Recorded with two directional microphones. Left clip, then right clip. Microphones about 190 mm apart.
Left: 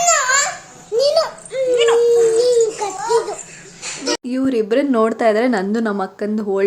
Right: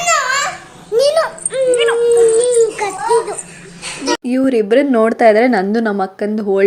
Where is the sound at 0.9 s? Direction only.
10° left (ahead or behind).